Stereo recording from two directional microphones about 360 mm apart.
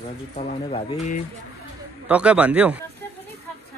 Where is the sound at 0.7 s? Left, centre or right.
Centre.